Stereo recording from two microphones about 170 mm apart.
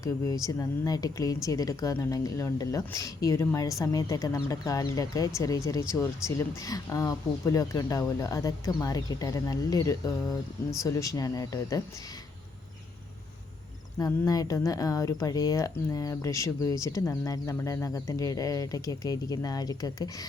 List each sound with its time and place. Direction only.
0.4 s speech: 20° left (ahead or behind)
14.0 s speech: 20° left (ahead or behind)